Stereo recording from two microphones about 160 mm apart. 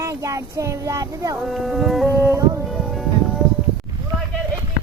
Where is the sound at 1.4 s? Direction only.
Centre (ahead or behind).